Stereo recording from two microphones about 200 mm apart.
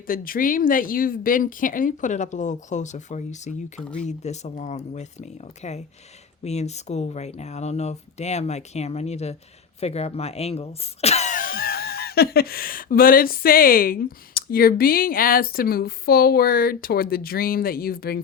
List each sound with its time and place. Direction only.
0.1 s speech: 45° left (ahead or behind)
3.8 s speech: 5° left (ahead or behind)
4.0 s speech: 35° left (ahead or behind)